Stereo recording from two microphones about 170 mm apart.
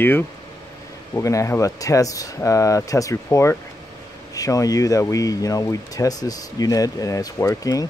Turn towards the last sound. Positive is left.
turn(degrees=20)  # may be behind; listen again after turning